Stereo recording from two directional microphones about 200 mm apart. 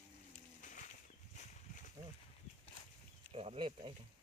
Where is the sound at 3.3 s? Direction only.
30° right (ahead or behind).